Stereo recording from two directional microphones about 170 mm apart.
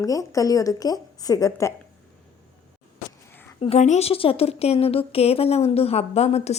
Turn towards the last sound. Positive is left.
turn(degrees=40)  # may be behind; listen again after turning